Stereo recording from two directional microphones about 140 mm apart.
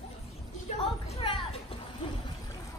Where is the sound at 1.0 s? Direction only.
45° left (ahead or behind).